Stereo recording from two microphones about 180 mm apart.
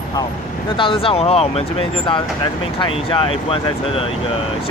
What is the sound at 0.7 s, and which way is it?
Speech, 30° left (ahead or behind).